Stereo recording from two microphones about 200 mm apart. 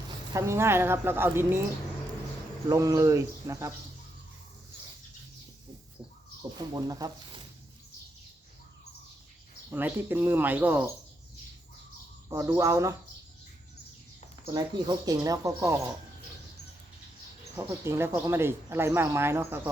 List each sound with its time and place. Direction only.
0.3 s speech: 15° right (ahead or behind)
2.6 s speech: 15° right (ahead or behind)
6.6 s speech: 20° right (ahead or behind)
9.6 s speech: 10° right (ahead or behind)
12.3 s speech: 15° right (ahead or behind)
14.5 s speech: 20° right (ahead or behind)
17.6 s speech: 15° right (ahead or behind)